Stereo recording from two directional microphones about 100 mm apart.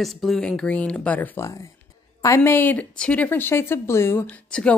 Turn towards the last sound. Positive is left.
turn(degrees=10)  # may be behind; listen again after turning